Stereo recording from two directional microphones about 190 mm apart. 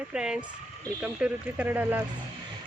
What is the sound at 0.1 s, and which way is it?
Speech, 5° right (ahead or behind).